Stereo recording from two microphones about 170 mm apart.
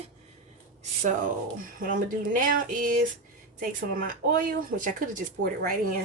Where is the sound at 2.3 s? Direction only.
50° right (ahead or behind).